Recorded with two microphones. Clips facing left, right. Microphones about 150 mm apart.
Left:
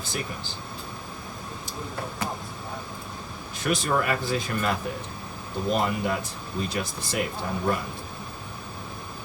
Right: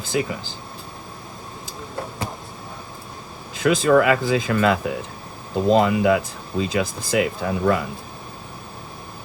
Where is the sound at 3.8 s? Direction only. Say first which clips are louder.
Right 12 dB; 90° right.